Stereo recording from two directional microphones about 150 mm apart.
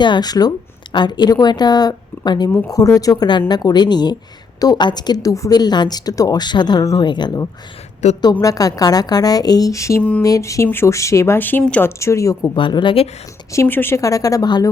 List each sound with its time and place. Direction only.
0.0 s a woman's voice: 30° left (ahead or behind)
10.0 s speech: 10° left (ahead or behind)
10.2 s a woman's voice: 20° left (ahead or behind)
12.5 s a woman's voice: 35° left (ahead or behind)
13.5 s a woman's voice: 15° left (ahead or behind)